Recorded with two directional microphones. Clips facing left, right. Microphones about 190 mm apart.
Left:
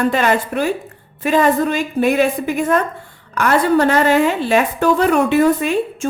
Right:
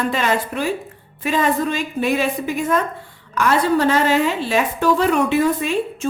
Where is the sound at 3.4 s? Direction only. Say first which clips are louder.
Left 3 dB; 60° left (ahead or behind).